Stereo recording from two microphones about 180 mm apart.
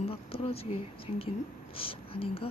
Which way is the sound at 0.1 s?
30° left (ahead or behind).